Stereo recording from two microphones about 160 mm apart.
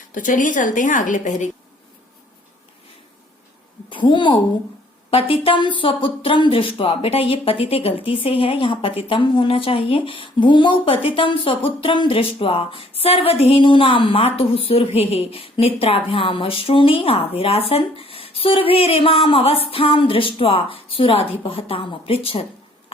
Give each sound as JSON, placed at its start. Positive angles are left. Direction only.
{"t": 0.1, "sound": "a woman's voice", "side_deg": 55}
{"t": 3.8, "sound": "a woman's voice", "side_deg": 30}